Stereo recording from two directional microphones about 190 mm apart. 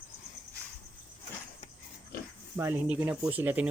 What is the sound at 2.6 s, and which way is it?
Speech, 10° right (ahead or behind).